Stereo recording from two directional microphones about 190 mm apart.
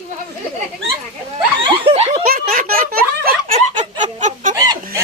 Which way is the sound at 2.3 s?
50° right (ahead or behind).